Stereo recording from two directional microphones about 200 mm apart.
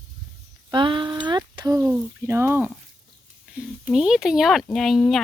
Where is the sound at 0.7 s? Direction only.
25° right (ahead or behind).